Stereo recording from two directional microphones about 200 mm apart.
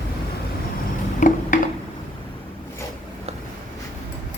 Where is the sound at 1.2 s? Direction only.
40° left (ahead or behind).